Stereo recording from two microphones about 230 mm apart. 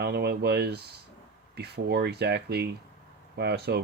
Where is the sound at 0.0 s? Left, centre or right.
Right.